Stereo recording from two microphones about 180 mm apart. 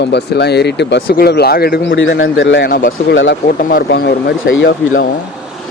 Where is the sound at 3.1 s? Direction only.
85° left.